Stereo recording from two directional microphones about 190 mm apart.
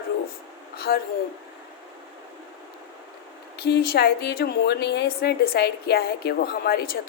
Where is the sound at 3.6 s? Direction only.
60° left (ahead or behind).